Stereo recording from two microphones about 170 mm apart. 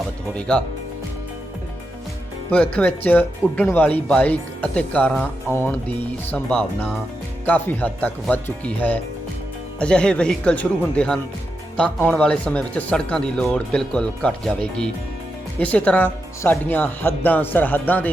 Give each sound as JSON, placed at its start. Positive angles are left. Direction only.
{"t": 0.3, "sound": "speech", "side_deg": 5}
{"t": 2.5, "sound": "speech", "side_deg": 10}